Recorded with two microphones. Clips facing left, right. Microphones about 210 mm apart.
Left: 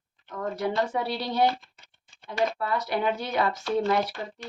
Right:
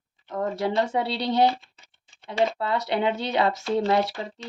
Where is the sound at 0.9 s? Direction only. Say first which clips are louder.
Right 3 dB; 25° right (ahead or behind).